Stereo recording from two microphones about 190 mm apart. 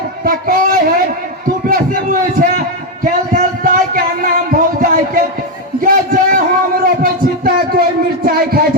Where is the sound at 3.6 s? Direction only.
50° right (ahead or behind).